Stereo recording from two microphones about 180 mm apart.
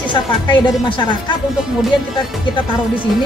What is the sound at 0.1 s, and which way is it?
A woman's voice, 25° left (ahead or behind).